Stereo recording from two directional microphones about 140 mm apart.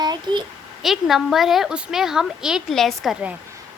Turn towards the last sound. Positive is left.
turn(degrees=-5)  # may be behind; listen again after turning